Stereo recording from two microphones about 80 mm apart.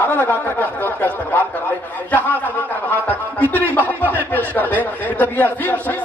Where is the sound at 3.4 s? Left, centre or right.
Right.